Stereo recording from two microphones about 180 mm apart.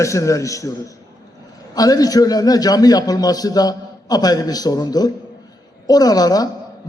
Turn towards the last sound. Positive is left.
turn(degrees=20)  # may be behind; listen again after turning